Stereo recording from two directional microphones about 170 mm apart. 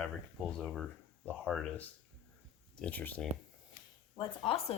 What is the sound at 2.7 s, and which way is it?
Speech, 10° left (ahead or behind).